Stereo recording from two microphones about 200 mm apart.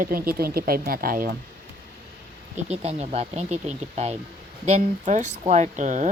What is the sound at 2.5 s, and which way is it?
A woman's voice, 30° right (ahead or behind).